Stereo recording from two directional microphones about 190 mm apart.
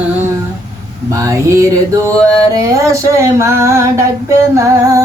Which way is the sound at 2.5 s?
20° right (ahead or behind).